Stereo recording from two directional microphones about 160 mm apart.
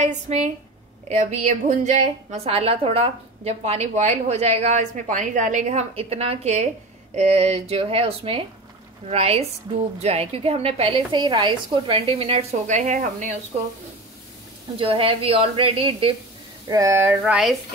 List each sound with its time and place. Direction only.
0.0 s a woman's voice: 45° right (ahead or behind)
2.3 s a woman's voice: 40° right (ahead or behind)
14.8 s speech: 35° right (ahead or behind)
16.6 s a sound: 20° right (ahead or behind)
17.2 s speech: 5° right (ahead or behind)